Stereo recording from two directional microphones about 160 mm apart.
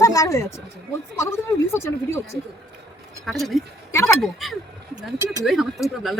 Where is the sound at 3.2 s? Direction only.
Centre (ahead or behind).